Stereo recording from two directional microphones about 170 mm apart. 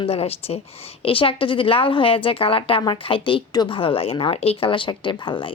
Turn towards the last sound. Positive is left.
turn(degrees=30)  # may be behind; listen again after turning